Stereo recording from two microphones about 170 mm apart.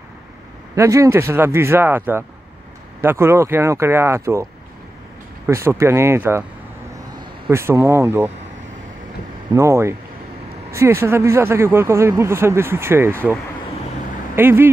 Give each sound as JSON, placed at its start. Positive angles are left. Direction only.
{"t": 0.7, "sound": "speech", "side_deg": -20}
{"t": 5.5, "sound": "speech", "side_deg": -15}
{"t": 7.5, "sound": "speech", "side_deg": -15}
{"t": 9.5, "sound": "speech", "side_deg": -15}
{"t": 14.3, "sound": "speech", "side_deg": -15}